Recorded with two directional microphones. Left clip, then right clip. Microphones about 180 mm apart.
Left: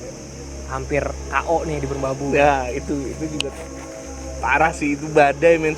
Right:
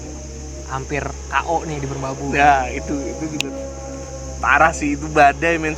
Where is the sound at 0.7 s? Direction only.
35° right (ahead or behind).